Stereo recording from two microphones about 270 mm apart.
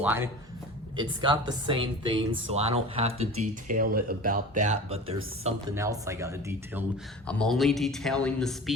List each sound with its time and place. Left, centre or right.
0.0 s speech: centre
5.7 s speech: centre
7.3 s speech: centre